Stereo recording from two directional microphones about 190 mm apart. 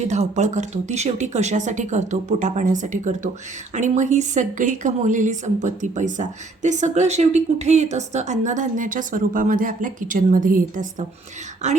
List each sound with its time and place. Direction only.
0.1 s a woman's voice: 40° right (ahead or behind)